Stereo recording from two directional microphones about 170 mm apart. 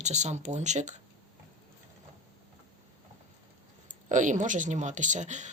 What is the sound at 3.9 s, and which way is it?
Speech, 45° right (ahead or behind).